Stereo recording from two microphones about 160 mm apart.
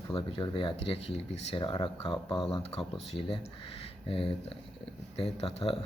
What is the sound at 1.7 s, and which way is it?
Speech, 25° left (ahead or behind).